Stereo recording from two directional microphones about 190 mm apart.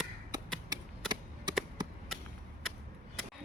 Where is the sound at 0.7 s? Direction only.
25° right (ahead or behind).